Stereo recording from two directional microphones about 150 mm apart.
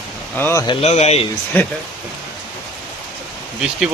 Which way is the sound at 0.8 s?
45° left (ahead or behind).